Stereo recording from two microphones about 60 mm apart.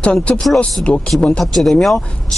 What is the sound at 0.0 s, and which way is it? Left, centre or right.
Speech, centre.